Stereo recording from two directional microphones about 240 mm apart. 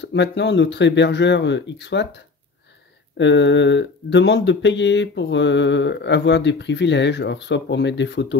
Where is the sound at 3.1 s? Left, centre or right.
Left.